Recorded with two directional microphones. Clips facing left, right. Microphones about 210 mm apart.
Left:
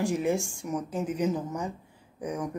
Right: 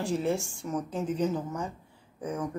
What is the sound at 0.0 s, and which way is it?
Speech, 15° left (ahead or behind).